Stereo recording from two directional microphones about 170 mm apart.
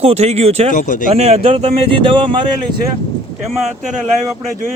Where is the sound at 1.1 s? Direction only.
35° right (ahead or behind).